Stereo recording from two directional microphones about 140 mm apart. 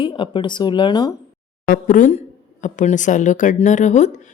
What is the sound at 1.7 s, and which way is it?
A woman's voice, 75° left (ahead or behind).